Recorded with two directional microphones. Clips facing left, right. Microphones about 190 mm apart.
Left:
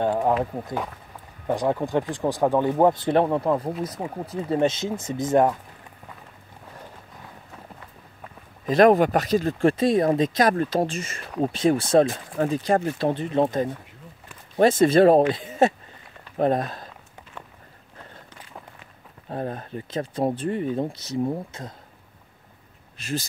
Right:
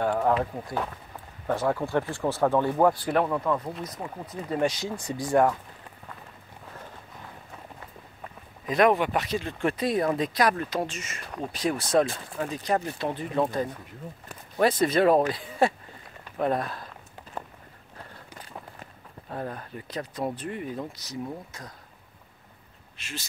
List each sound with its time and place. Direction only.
0.0 s speech: 20° left (ahead or behind)
1.5 s speech: 15° left (ahead or behind); by 3.7 s 30° left (ahead or behind)
3.7 s speech: 10° left (ahead or behind)
4.5 s speech: 25° left (ahead or behind)
8.6 s speech: 40° left (ahead or behind); by 10.4 s 25° left (ahead or behind)
10.4 s speech: 35° left (ahead or behind)
12.1 s speech: 40° left (ahead or behind)
13.1 s speech: 25° left (ahead or behind)
16.3 s speech: 40° left (ahead or behind)
19.2 s speech: 30° left (ahead or behind)
22.9 s speech: 35° left (ahead or behind)